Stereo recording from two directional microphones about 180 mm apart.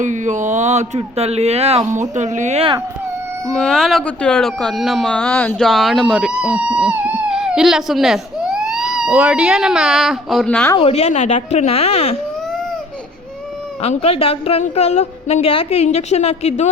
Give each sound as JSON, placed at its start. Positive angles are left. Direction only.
{"t": 0.0, "sound": "speech", "side_deg": -45}
{"t": 3.5, "sound": "speech", "side_deg": 5}
{"t": 10.8, "sound": "a woman's voice", "side_deg": 35}
{"t": 13.8, "sound": "a woman's voice", "side_deg": 35}